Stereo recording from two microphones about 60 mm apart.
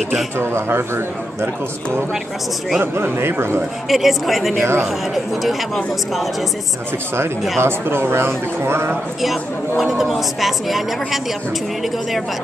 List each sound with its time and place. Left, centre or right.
0.4 s speech: right
2.8 s speech: right
3.9 s a woman's voice: centre
7.6 s speech: right
9.2 s a woman's voice: centre